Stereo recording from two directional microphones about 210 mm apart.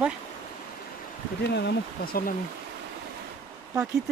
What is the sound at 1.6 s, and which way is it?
Speech, 50° left (ahead or behind).